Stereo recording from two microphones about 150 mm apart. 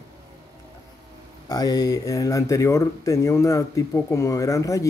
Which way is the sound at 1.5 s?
25° left (ahead or behind).